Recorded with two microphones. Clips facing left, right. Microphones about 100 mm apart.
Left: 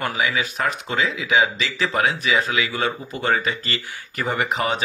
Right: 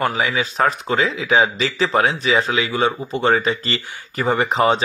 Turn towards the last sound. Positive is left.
turn(degrees=-30)  # may be behind; listen again after turning